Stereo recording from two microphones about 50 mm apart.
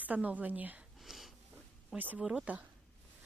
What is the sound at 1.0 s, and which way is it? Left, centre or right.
Wheeze, centre.